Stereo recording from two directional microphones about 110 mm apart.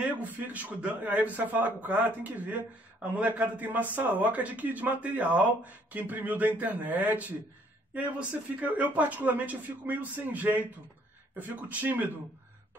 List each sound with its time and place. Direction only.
0.0 s a man's voice: 15° right (ahead or behind)